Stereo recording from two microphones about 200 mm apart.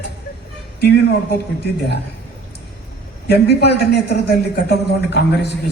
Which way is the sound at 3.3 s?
55° left (ahead or behind).